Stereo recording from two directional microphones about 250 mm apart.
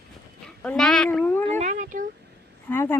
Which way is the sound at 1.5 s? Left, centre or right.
Right.